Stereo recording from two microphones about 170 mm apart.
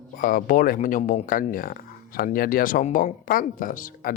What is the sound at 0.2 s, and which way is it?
Speech, 55° left (ahead or behind).